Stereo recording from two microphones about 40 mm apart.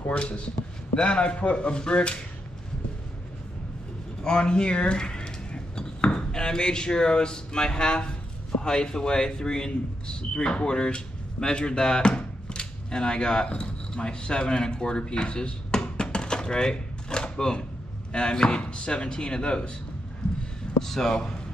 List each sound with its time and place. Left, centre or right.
0.1 s speech: left
4.2 s speech: left
20.8 s speech: centre